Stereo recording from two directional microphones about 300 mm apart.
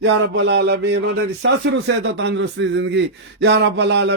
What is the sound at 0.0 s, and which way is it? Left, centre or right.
Speech, right.